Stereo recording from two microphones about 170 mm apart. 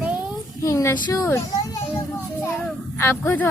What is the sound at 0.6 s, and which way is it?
Child singing, 15° left (ahead or behind).